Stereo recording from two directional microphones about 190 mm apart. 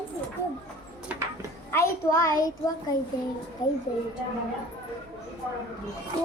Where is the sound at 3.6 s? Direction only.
20° left (ahead or behind).